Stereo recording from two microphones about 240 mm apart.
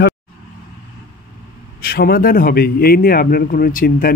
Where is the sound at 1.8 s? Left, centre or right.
Left.